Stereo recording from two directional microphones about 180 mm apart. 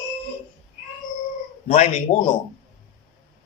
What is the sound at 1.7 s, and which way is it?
Speech, 50° left (ahead or behind).